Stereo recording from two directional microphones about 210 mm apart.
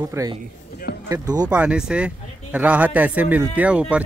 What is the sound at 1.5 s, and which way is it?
A man's voice, 5° right (ahead or behind).